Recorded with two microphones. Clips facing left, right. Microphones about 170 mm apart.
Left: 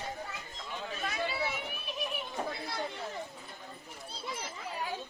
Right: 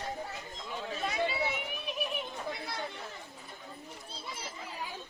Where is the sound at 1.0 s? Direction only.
20° right (ahead or behind).